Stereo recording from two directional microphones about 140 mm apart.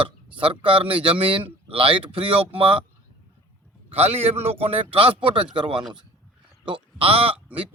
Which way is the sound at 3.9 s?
45° right (ahead or behind).